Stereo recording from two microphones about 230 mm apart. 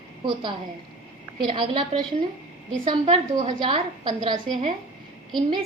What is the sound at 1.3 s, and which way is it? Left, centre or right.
A woman's voice, right.